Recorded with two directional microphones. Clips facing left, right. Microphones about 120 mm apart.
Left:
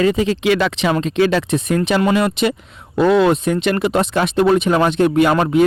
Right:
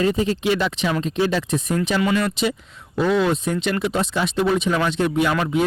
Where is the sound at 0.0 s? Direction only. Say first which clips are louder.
Left 4 dB; 90° left; by 2.0 s 65° left (ahead or behind).